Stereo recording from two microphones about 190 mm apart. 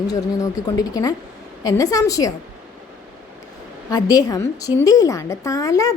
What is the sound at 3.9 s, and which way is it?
A woman's voice, 20° left (ahead or behind).